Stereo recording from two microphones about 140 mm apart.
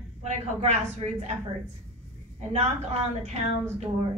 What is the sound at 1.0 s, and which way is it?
Speech, 40° right (ahead or behind).